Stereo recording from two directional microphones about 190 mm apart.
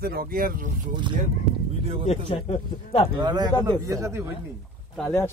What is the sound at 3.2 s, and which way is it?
Speech, 20° right (ahead or behind).